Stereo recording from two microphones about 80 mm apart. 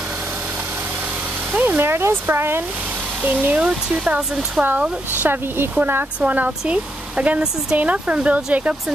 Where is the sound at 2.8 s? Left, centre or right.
Right.